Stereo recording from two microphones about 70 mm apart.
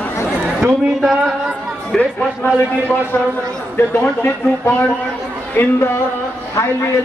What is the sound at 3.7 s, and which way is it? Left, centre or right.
A man's voice, left.